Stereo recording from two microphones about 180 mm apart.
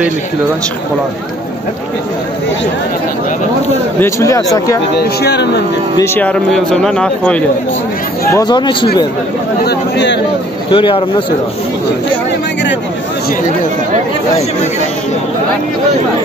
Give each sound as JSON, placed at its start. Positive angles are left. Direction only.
{"t": 4.0, "sound": "speech", "side_deg": 15}
{"t": 5.2, "sound": "speech", "side_deg": 70}
{"t": 5.9, "sound": "speech", "side_deg": 15}
{"t": 8.3, "sound": "speech", "side_deg": 20}
{"t": 9.7, "sound": "speech", "side_deg": 75}
{"t": 10.7, "sound": "speech", "side_deg": 30}